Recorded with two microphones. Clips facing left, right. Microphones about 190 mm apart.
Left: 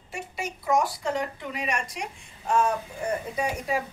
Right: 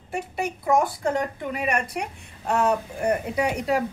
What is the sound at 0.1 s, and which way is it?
A woman's voice, 55° right (ahead or behind).